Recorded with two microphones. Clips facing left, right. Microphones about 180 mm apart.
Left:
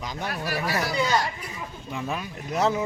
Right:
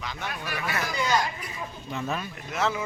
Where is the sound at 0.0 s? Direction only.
40° left (ahead or behind).